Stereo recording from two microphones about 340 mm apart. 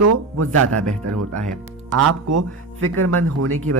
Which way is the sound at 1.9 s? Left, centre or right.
Right.